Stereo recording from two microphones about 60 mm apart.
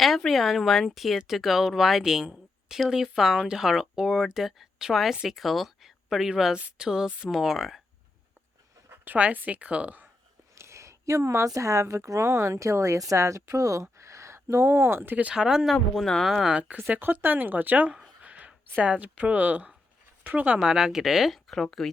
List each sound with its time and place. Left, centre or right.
0.3 s speech: centre
9.0 s speech: right
10.6 s speech: right
13.8 s a sound: right
15.1 s speech: right
15.4 s speech: centre
16.9 s speech: right
18.2 s a sound: right
18.8 s speech: right
20.6 s speech: centre